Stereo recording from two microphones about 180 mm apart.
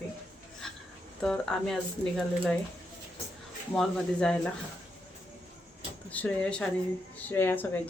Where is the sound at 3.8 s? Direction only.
5° left (ahead or behind).